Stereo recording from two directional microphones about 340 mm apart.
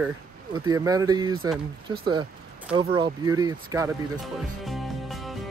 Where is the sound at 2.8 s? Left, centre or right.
Centre.